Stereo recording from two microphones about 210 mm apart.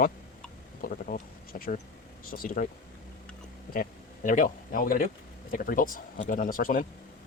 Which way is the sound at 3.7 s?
40° left (ahead or behind).